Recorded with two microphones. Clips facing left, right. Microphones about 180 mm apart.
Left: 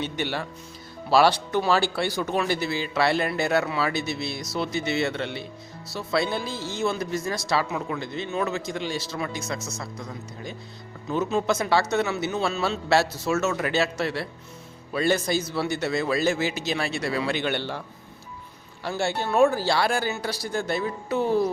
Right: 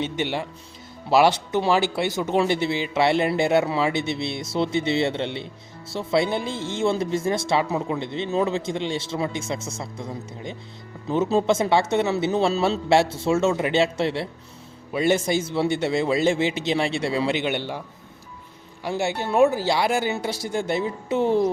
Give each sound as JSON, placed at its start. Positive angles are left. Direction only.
{"t": 0.0, "sound": "speech", "side_deg": -20}